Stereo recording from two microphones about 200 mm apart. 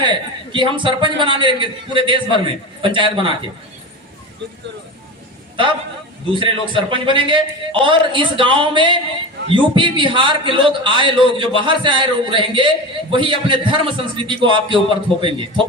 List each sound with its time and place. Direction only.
0.0 s a man's voice: 25° right (ahead or behind)
6.4 s a man's voice: 25° right (ahead or behind)